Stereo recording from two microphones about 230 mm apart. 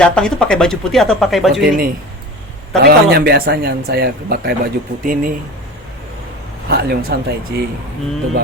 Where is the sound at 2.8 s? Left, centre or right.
Right.